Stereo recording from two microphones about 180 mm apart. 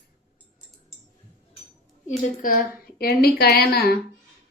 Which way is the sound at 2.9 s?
60° left (ahead or behind).